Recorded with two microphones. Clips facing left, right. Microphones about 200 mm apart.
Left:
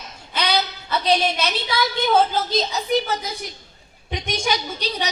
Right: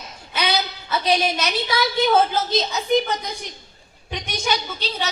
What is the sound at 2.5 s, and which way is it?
Speech, centre (ahead or behind).